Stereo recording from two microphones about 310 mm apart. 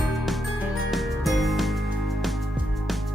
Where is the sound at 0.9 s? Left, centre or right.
Centre.